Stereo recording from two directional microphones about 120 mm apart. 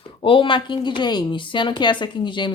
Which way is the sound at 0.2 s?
45° left (ahead or behind).